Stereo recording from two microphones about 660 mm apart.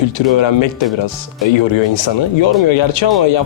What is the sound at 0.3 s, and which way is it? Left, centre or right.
Speech, left.